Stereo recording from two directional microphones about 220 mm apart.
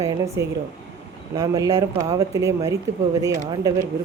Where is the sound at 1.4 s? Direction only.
15° right (ahead or behind).